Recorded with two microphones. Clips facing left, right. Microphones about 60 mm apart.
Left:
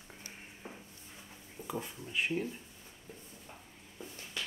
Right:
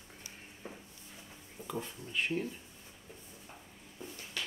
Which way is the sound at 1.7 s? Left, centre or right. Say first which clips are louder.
Even; centre.